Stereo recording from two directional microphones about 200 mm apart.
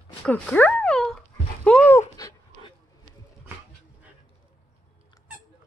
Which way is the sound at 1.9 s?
15° left (ahead or behind).